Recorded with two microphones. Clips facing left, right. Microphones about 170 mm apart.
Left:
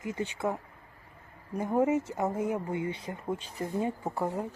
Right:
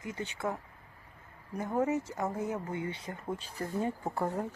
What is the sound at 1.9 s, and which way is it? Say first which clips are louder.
Speech: left 4 dB; 20° left (ahead or behind).